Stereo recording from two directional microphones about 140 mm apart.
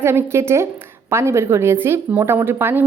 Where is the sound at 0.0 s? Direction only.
15° right (ahead or behind).